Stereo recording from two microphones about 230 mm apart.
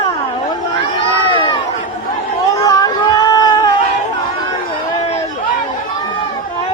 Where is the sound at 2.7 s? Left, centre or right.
Centre.